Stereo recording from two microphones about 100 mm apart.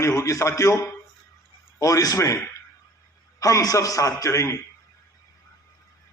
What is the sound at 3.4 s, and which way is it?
A man's voice, 35° left (ahead or behind).